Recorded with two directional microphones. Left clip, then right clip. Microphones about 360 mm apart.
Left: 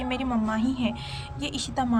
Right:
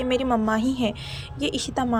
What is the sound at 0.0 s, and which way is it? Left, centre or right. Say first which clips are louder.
A woman's voice: right 6 dB; centre.